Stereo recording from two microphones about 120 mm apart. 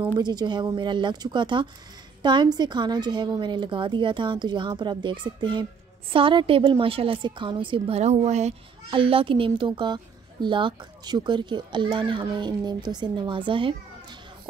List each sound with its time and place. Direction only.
0.2 s a woman's voice: 35° right (ahead or behind)
8.0 s speech: 70° right (ahead or behind)
8.9 s a woman's voice: 50° right (ahead or behind)